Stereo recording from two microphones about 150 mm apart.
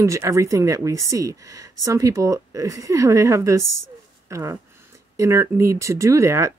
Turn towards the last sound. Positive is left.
turn(degrees=-20)  # may be behind; listen again after turning